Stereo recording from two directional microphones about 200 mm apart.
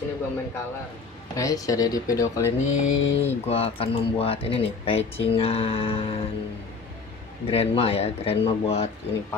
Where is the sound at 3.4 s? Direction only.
30° left (ahead or behind).